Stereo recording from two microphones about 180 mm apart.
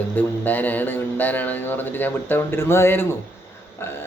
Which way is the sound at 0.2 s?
10° left (ahead or behind).